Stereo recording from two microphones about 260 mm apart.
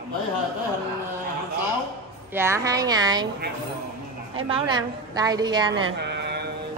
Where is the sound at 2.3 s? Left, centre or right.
Centre.